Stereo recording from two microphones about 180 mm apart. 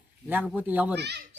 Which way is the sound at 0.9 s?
70° right (ahead or behind).